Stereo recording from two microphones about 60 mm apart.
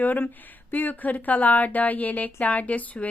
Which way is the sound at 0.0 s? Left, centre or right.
Left.